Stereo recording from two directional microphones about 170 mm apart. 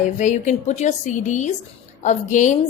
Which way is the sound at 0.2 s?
45° left (ahead or behind).